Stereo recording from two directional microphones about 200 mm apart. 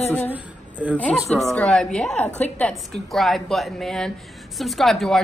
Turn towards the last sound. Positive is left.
turn(degrees=0)  # may be behind; listen again after turning